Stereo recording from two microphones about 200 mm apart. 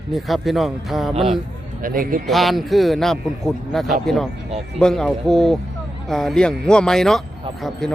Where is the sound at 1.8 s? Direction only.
45° right (ahead or behind).